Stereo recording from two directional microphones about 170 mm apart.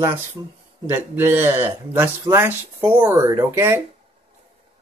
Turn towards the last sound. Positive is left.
turn(degrees=-15)  # may be behind; listen again after turning